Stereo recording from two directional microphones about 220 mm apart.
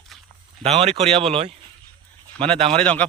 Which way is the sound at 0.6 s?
30° right (ahead or behind).